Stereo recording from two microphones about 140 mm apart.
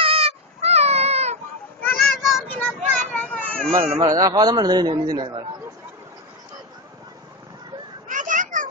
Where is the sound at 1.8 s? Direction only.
Centre (ahead or behind).